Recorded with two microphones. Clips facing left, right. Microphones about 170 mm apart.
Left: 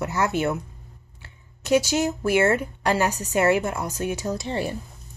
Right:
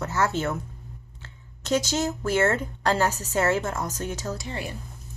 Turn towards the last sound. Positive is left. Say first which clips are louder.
# left 7 dB
turn(degrees=30)  # may be behind; listen again after turning